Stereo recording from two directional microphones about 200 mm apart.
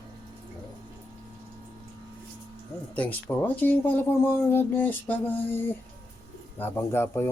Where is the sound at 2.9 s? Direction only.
10° left (ahead or behind).